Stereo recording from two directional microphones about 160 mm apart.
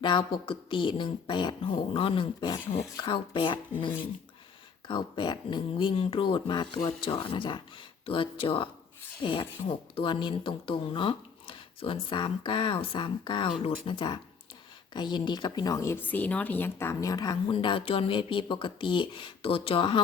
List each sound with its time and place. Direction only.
0.0 s a woman's voice: 30° left (ahead or behind)
4.9 s a woman's voice: 30° left (ahead or behind)